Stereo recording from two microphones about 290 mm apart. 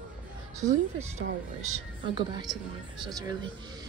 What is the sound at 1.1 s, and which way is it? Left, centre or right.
A woman's voice, right.